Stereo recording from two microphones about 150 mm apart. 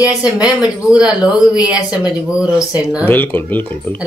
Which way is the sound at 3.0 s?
15° left (ahead or behind).